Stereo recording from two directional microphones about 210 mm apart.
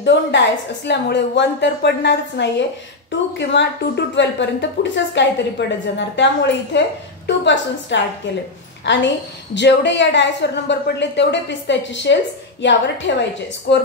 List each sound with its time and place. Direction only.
0.0 s a woman's voice: 60° left (ahead or behind)